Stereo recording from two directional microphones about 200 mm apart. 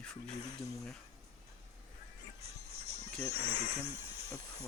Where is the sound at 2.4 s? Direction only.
30° right (ahead or behind).